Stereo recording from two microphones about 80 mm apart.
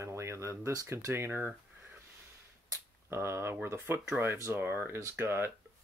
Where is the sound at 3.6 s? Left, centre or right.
Right.